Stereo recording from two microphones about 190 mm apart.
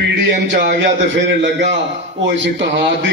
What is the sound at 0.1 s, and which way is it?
A man's voice, 65° right (ahead or behind).